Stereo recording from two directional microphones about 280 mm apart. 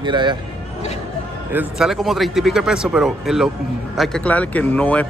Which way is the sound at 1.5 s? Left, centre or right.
Centre.